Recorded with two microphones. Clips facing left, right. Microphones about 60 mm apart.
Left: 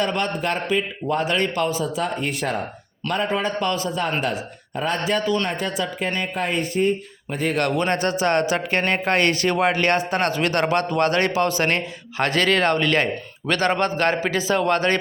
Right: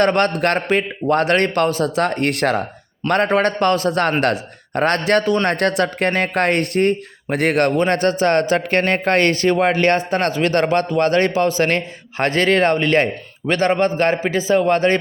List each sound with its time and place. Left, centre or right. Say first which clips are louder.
0.0 s a man's voice: right 7 dB; right
3.1 s a man's voice: right 7 dB; right
4.2 s a man's voice: right 6 dB; right
7.6 s a man's voice: right 4 dB; right